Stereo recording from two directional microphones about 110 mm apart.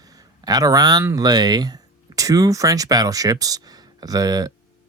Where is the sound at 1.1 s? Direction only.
35° right (ahead or behind).